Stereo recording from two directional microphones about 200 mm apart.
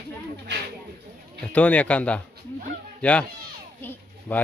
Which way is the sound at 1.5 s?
5° left (ahead or behind).